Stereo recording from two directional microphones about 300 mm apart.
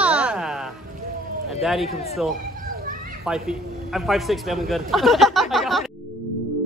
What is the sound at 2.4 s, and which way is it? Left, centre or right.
Children playing, right.